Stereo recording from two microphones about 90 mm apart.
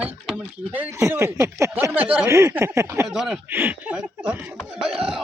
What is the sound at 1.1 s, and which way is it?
Speech, 30° right (ahead or behind).